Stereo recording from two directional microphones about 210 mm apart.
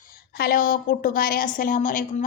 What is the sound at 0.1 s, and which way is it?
A woman's voice, 45° left (ahead or behind).